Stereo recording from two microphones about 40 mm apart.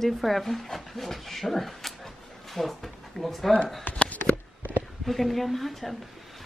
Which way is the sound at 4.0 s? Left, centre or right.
Left.